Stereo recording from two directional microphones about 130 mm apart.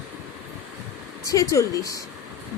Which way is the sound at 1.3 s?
25° left (ahead or behind).